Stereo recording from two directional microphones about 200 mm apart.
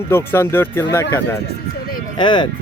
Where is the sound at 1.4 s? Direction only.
50° left (ahead or behind).